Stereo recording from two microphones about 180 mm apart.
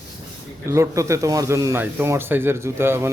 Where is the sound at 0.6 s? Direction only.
15° right (ahead or behind).